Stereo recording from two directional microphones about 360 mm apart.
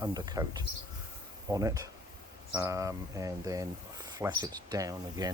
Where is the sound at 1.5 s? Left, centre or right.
Centre.